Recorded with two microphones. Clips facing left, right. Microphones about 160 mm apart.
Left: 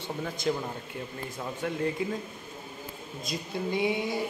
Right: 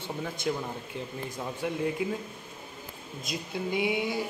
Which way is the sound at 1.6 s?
15° right (ahead or behind).